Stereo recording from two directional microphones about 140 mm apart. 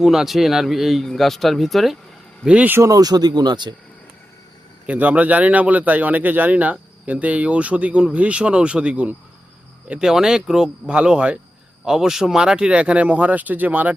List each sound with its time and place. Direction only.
0.0 s speech: centre (ahead or behind); by 3.8 s 30° right (ahead or behind)
4.9 s speech: 10° right (ahead or behind)